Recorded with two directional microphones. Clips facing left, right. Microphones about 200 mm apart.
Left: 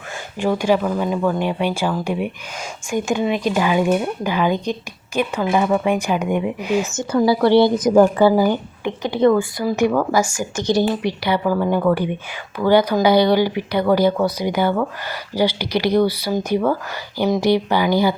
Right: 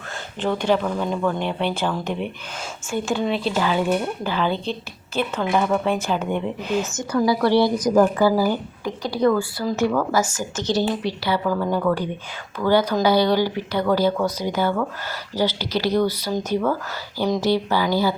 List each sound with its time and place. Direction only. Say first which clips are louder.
0.3 s speech: left 3 dB; 10° left (ahead or behind)
6.9 s a woman's voice: left 3 dB; 25° left (ahead or behind)